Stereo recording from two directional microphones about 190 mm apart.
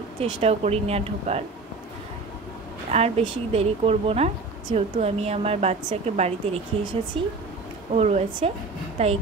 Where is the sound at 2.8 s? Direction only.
35° right (ahead or behind).